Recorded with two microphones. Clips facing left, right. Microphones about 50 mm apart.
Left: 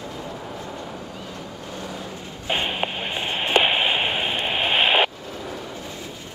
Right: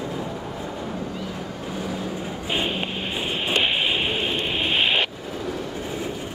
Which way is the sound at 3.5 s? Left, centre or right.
Centre.